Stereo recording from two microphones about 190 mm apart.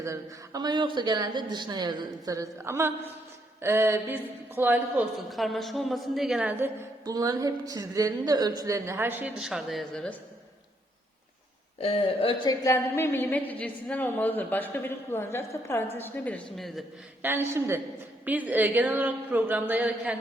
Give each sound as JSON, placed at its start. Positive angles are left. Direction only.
{"t": 0.0, "sound": "a woman's voice", "side_deg": -15}
{"t": 7.0, "sound": "a woman's voice", "side_deg": -20}
{"t": 11.8, "sound": "a woman's voice", "side_deg": 30}
{"t": 17.2, "sound": "a woman's voice", "side_deg": -10}